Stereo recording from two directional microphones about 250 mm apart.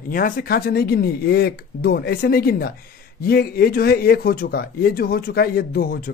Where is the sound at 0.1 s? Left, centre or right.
Left.